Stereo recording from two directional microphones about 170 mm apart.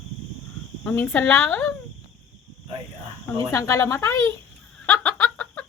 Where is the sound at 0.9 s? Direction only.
10° left (ahead or behind).